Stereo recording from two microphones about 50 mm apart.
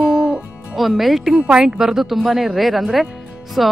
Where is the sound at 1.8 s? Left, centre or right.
Centre.